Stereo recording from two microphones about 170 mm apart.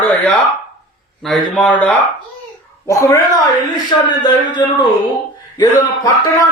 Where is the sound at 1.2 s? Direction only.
5° left (ahead or behind); by 4.9 s 25° left (ahead or behind).